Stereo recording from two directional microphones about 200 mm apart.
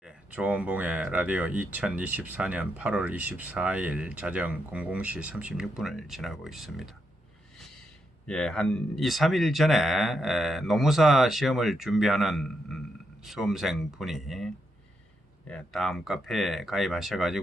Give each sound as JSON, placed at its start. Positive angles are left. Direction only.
{"t": 0.0, "sound": "speech", "side_deg": -5}
{"t": 8.3, "sound": "a man's voice", "side_deg": 5}